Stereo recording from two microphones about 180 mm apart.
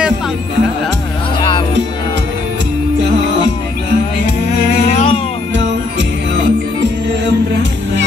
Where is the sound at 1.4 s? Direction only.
25° left (ahead or behind).